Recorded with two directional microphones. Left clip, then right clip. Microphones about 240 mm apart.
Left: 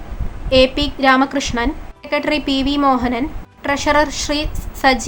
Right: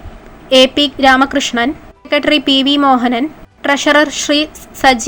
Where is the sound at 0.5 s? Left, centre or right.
Centre.